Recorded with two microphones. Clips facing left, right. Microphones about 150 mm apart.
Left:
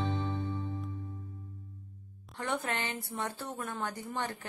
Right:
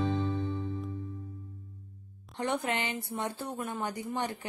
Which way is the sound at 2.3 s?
20° right (ahead or behind).